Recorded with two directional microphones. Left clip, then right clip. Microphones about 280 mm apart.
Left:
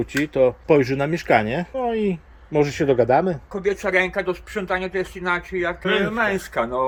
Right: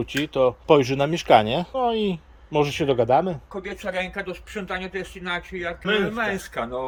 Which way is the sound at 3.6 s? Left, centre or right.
Left.